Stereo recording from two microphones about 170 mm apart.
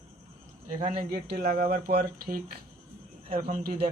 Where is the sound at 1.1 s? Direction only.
65° right (ahead or behind).